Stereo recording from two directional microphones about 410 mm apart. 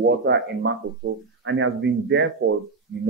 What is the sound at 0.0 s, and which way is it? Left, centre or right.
Speech, right.